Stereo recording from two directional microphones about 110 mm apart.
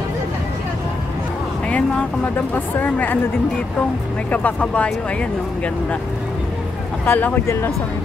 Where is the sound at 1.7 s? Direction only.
10° left (ahead or behind).